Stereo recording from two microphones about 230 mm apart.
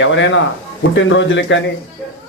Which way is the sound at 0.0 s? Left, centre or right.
Left.